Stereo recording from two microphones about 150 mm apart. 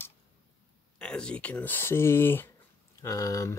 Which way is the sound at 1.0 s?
5° left (ahead or behind).